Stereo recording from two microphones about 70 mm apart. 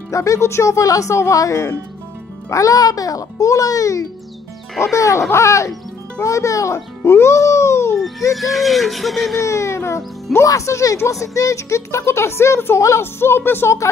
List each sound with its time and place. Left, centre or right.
0.1 s a child's voice: left
7.1 s a sound: left
8.3 s speech: centre
9.4 s a woman's voice: left